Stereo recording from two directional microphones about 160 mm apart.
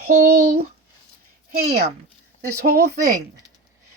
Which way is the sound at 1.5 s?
90° right.